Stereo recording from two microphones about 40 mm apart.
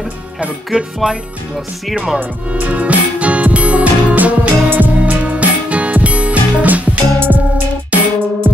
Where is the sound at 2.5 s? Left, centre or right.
Right.